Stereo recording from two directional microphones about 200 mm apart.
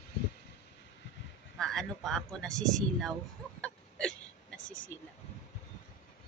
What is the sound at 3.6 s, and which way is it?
Hiccup, 5° left (ahead or behind).